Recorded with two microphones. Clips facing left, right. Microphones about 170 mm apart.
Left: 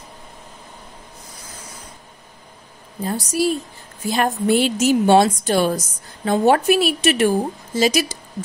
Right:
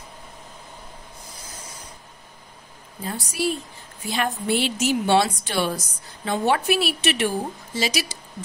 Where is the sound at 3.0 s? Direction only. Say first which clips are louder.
Left 6 dB; 40° left (ahead or behind).